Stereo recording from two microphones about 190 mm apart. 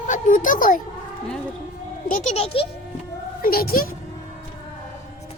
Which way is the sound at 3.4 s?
50° left (ahead or behind).